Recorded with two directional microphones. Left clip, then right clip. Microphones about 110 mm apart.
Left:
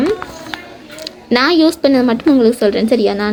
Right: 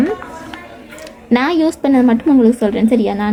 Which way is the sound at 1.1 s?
30° right (ahead or behind).